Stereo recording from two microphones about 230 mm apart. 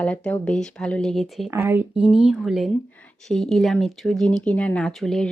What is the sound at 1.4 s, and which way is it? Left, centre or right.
Speech, centre.